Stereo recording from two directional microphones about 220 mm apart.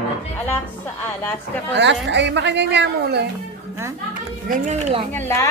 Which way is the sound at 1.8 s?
50° right (ahead or behind).